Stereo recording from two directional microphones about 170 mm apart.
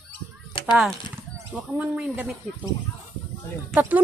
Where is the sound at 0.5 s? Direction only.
30° left (ahead or behind).